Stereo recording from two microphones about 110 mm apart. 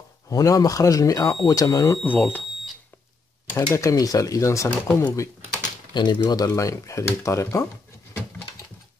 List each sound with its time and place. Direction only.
0.3 s speech: 35° left (ahead or behind)
2.0 s speech: 15° left (ahead or behind)
3.7 s speech: 30° left (ahead or behind)
5.9 s speech: 40° left (ahead or behind)